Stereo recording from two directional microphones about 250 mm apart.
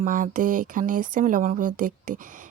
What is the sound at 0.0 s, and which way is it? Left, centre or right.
A woman's voice, right.